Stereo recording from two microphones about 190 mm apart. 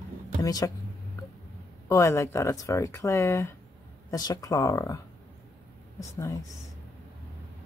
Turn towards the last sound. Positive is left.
turn(degrees=15)  # may be behind; listen again after turning